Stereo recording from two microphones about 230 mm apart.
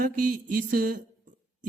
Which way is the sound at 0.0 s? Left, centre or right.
Right.